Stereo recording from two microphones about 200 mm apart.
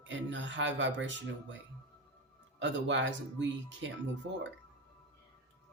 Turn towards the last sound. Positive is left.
turn(degrees=-65)  # may be behind; listen again after turning